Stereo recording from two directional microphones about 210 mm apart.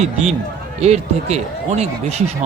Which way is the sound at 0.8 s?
30° right (ahead or behind).